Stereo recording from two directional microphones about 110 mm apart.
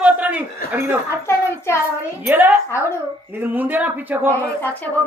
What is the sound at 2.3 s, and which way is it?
Speech, 15° right (ahead or behind).